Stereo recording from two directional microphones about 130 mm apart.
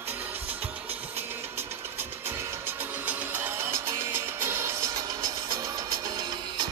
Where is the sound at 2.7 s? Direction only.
15° right (ahead or behind); by 6.7 s 30° right (ahead or behind).